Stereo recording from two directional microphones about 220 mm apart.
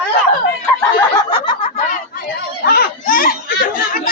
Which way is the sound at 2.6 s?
45° left (ahead or behind).